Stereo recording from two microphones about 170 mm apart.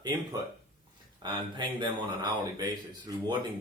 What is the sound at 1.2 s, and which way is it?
Speech, 25° right (ahead or behind).